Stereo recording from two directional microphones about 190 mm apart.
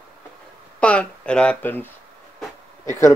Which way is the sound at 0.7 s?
5° left (ahead or behind).